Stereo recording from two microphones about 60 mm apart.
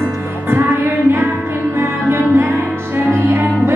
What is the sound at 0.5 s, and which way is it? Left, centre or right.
Music, right.